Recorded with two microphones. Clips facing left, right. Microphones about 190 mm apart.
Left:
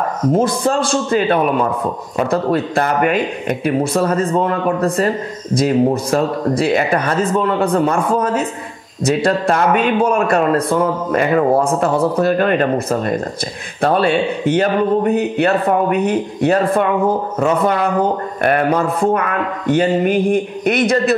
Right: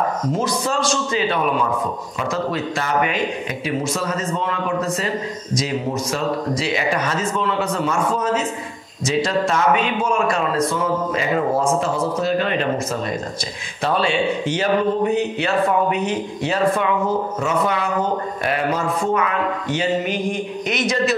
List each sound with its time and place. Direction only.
0.3 s speech: 55° left (ahead or behind)